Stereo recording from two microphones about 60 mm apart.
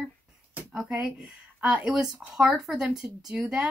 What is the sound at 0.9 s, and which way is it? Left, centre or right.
Speech, centre.